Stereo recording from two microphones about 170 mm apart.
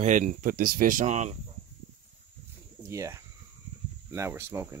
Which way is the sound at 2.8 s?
15° right (ahead or behind).